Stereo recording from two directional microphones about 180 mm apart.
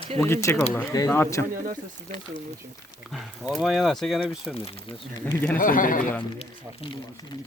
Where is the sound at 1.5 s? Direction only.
50° right (ahead or behind).